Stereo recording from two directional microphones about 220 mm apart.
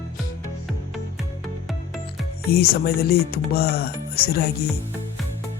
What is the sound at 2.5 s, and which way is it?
Speech, 45° left (ahead or behind).